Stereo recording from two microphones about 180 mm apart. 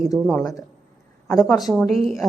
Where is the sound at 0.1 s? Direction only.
Centre (ahead or behind).